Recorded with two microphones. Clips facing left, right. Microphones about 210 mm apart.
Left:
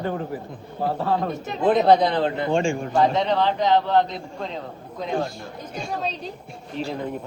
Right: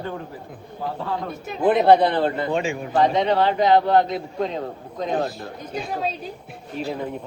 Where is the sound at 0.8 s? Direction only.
45° left (ahead or behind).